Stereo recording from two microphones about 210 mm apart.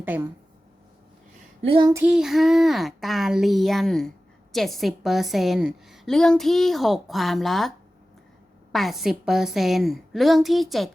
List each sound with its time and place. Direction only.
0.0 s speech: 10° right (ahead or behind)
1.6 s child singing: 25° right (ahead or behind)
1.9 s a woman's voice: 10° right (ahead or behind)
8.7 s a woman's voice: centre (ahead or behind)